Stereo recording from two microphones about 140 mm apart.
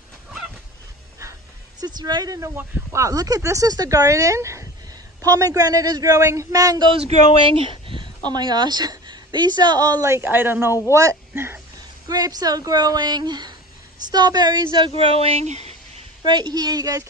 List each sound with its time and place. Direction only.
1.8 s a woman's voice: 30° right (ahead or behind)
6.9 s speech: 45° right (ahead or behind)
8.3 s a woman's voice: 30° right (ahead or behind)
12.1 s a woman's voice: 25° right (ahead or behind)
15.0 s speech: 45° right (ahead or behind)
16.3 s a woman's voice: 30° right (ahead or behind)